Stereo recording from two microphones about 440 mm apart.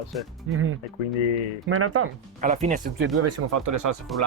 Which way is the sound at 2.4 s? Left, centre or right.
Centre.